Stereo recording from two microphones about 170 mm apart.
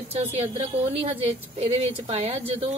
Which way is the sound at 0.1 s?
35° right (ahead or behind).